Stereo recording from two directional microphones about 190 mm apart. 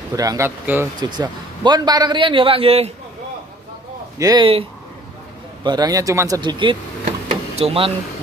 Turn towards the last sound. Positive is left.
turn(degrees=-30)  # may be behind; listen again after turning